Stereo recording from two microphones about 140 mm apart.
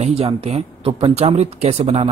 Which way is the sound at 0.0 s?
45° right (ahead or behind).